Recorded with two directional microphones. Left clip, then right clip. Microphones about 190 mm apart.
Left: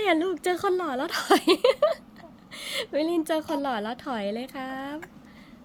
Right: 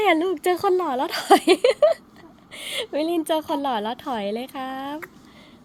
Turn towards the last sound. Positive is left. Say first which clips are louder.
# right 4 dB
turn(degrees=-5)  # may be behind; listen again after turning